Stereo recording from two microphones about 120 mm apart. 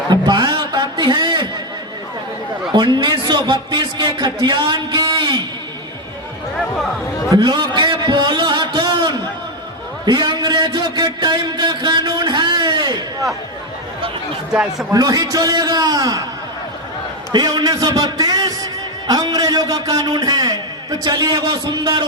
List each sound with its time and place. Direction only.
0.1 s a sound: 35° right (ahead or behind)
2.7 s a man's voice: 40° right (ahead or behind)
7.3 s a sound: 35° right (ahead or behind)
14.5 s a man's voice: 5° right (ahead or behind)
14.9 s a man's voice: 30° right (ahead or behind)
17.3 s a man's voice: 35° right (ahead or behind)